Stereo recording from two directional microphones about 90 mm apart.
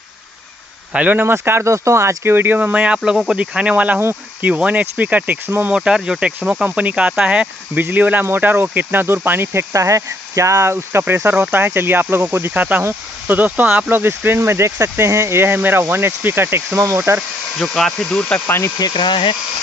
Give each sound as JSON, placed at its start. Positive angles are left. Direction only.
{"t": 0.9, "sound": "speech", "side_deg": -20}
{"t": 5.8, "sound": "speech", "side_deg": -5}
{"t": 17.6, "sound": "speech", "side_deg": 5}
{"t": 18.8, "sound": "speech", "side_deg": 55}